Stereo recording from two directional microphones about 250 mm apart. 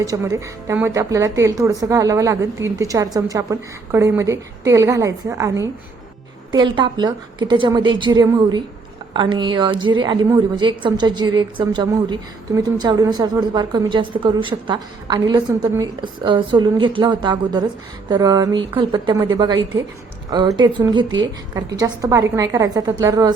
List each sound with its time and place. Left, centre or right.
0.0 s a woman's voice: centre